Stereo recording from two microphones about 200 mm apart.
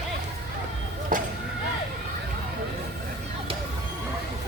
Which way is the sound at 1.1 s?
40° right (ahead or behind).